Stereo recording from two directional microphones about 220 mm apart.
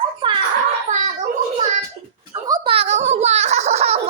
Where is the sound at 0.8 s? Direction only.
30° right (ahead or behind).